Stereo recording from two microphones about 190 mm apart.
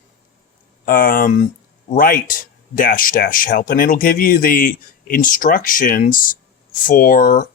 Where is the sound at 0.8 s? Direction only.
45° left (ahead or behind).